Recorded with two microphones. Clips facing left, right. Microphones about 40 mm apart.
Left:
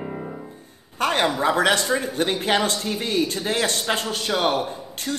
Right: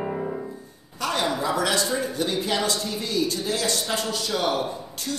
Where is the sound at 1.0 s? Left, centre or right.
Left.